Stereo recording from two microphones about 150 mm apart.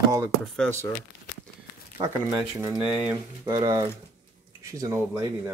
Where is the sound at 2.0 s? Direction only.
20° right (ahead or behind).